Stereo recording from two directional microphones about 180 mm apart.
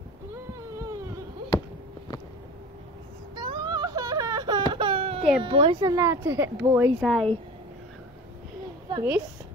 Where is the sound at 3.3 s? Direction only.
25° right (ahead or behind).